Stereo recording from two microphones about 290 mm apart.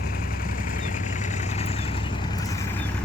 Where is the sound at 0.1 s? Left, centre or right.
Left; by 2.6 s centre.